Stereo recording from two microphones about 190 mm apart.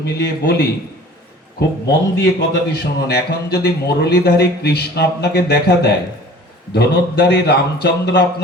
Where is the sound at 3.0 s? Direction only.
60° left (ahead or behind).